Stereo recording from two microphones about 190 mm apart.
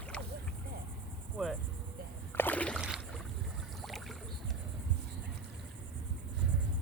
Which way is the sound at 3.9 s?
Centre (ahead or behind).